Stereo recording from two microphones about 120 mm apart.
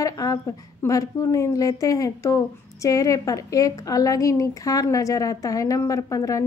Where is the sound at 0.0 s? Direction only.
30° left (ahead or behind).